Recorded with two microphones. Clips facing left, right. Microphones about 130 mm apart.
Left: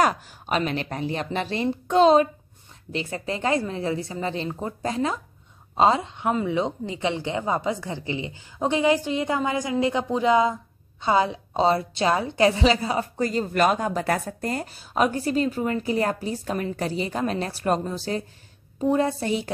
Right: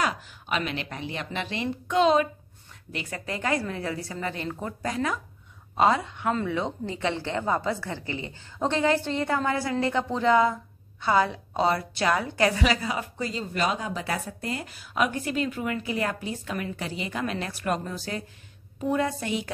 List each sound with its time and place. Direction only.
0.0 s a woman's voice: 45° left (ahead or behind)
13.1 s speech: 50° left (ahead or behind)
14.7 s a woman's voice: 35° left (ahead or behind)